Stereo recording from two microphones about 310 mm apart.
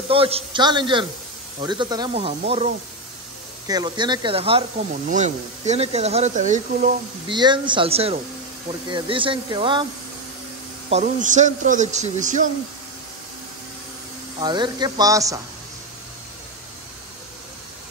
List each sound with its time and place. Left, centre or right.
0.1 s speech: centre
10.9 s speech: right
14.4 s speech: centre